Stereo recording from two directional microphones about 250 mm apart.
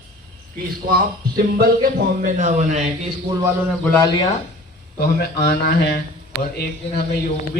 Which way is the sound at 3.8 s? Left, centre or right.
Centre.